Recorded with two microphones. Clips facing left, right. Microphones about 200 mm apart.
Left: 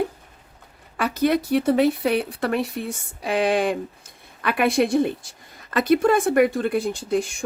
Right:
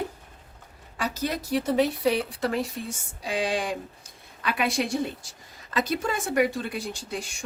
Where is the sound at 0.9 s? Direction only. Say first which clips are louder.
Left 9 dB; 60° left (ahead or behind).